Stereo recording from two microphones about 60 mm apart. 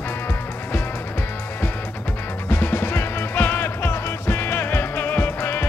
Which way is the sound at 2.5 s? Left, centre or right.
Left.